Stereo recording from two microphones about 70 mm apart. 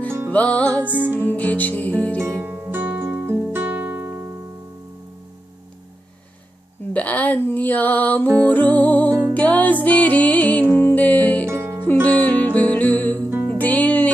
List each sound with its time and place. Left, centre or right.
0.3 s music: left
0.9 s music: right
1.3 s music: left
2.4 s music: right
6.9 s music: left
11.4 s music: right
12.0 s music: centre